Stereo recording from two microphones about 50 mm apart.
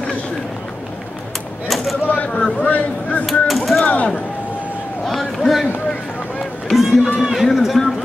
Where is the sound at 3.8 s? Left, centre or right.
Left.